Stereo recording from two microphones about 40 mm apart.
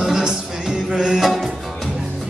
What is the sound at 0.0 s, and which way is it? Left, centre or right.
Music, centre.